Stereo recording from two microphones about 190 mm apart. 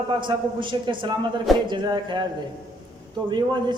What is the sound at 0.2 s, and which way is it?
A man's voice, 25° right (ahead or behind).